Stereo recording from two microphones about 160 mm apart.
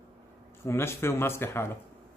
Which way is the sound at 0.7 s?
15° left (ahead or behind).